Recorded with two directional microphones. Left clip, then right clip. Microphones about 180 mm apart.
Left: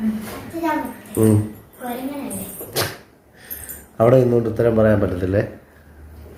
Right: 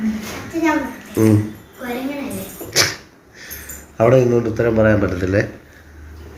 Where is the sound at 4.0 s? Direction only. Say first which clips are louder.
Right 1 dB; 20° left (ahead or behind).